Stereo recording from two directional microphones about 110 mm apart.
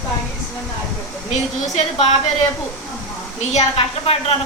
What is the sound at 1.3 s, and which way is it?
Speech, 80° left.